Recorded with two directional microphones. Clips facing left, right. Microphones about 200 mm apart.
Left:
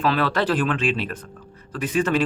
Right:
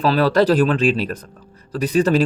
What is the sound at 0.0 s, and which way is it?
Speech, 40° right (ahead or behind).